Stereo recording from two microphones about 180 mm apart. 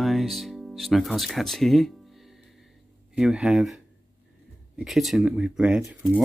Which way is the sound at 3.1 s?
5° right (ahead or behind).